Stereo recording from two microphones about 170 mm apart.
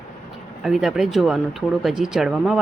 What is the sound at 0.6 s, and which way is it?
Speech, centre (ahead or behind).